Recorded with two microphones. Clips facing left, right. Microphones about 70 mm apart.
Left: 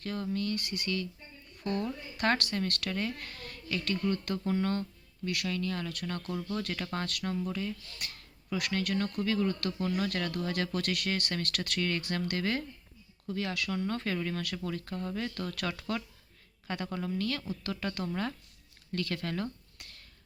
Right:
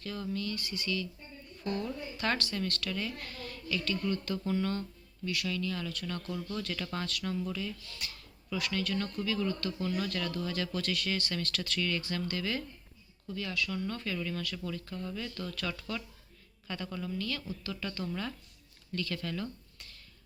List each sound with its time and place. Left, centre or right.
0.0 s speech: left
5.2 s speech: left
8.5 s a woman's voice: left
14.2 s a woman's voice: left